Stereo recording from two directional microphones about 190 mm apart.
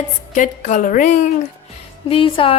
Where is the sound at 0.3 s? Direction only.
40° left (ahead or behind).